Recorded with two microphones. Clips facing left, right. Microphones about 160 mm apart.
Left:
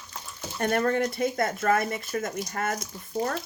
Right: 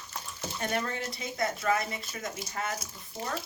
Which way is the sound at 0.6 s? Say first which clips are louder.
Left 9 dB; 55° left (ahead or behind).